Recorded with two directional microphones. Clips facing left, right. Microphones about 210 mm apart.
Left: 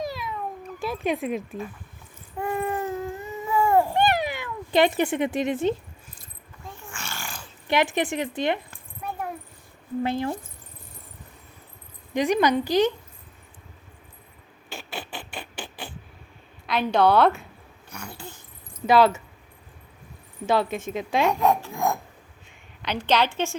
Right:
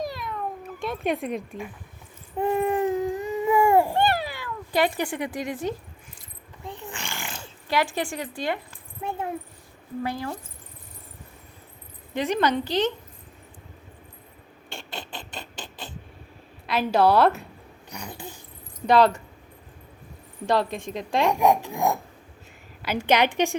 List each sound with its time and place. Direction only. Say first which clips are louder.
0.0 s cat: even; centre (ahead or behind)
2.4 s a sound: right 5 dB; 15° right (ahead or behind)
3.9 s cat: left 1 dB; 15° left (ahead or behind)
6.7 s a sound: right 3 dB; 20° right (ahead or behind)
7.7 s speech: left 3 dB; 20° left (ahead or behind)
10.0 s speech: left 4 dB; 25° left (ahead or behind)
12.1 s a woman's voice: left 3 dB; 15° left (ahead or behind)
14.7 s a sound: left 2 dB; 5° left (ahead or behind)
16.6 s a woman's voice: even; 5° right (ahead or behind)
17.8 s dog: right 1 dB; 15° right (ahead or behind)
18.9 s a woman's voice: even; 5° left (ahead or behind)
20.5 s a woman's voice: left 1 dB; 5° left (ahead or behind)
21.2 s a woman's voice: right 4 dB; 15° right (ahead or behind)